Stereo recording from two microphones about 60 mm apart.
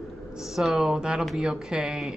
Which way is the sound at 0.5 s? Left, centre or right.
Centre.